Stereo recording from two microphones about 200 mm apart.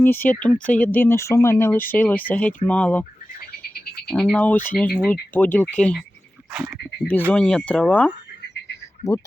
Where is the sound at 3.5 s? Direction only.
50° left (ahead or behind).